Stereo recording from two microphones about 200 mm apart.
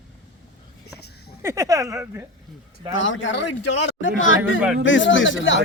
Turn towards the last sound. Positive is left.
turn(degrees=70)  # may be behind; listen again after turning